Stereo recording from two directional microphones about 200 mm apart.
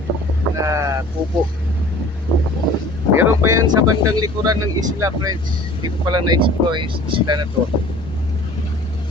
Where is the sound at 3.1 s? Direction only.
15° right (ahead or behind).